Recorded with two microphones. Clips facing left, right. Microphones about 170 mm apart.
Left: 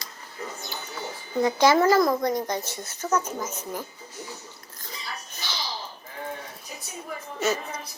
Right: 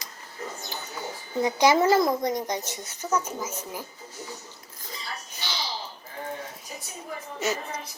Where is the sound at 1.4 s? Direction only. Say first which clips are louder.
Left 1 dB; 15° right (ahead or behind).